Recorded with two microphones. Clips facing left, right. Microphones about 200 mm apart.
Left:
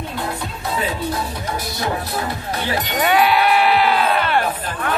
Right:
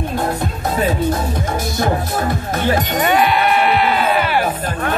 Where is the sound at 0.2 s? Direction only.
45° right (ahead or behind).